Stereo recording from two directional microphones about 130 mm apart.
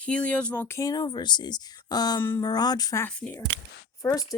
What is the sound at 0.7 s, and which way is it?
A woman's voice, 30° left (ahead or behind).